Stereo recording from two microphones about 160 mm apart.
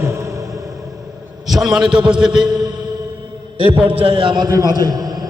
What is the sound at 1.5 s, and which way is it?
Speech, centre (ahead or behind).